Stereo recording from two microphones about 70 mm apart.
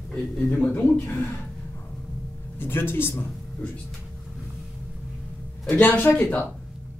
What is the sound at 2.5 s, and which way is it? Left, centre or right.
Speech, left.